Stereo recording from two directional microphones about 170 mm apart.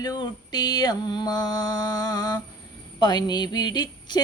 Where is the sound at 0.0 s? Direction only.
25° left (ahead or behind).